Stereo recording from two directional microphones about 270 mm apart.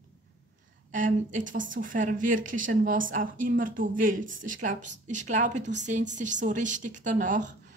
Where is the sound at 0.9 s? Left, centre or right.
Right.